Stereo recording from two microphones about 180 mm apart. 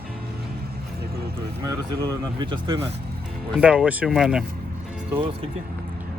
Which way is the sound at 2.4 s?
25° right (ahead or behind).